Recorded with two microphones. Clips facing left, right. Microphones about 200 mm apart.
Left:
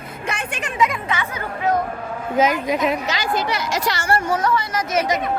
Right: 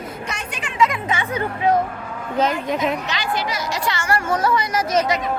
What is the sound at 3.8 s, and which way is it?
Speech, 35° left (ahead or behind).